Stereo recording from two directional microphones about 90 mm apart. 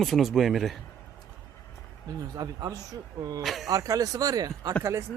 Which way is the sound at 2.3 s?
45° right (ahead or behind).